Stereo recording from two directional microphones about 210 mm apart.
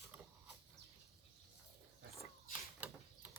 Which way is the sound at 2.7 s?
5° right (ahead or behind).